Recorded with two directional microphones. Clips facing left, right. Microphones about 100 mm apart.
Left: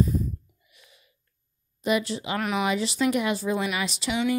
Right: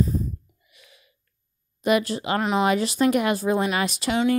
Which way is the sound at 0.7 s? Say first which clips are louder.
Right 4 dB; 85° right.